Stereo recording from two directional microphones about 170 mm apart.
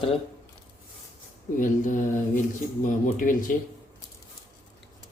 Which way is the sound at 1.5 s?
50° left (ahead or behind).